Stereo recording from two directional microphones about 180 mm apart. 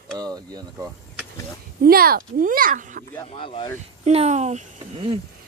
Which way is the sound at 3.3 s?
30° left (ahead or behind).